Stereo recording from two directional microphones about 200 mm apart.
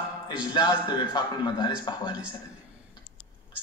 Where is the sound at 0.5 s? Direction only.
20° left (ahead or behind).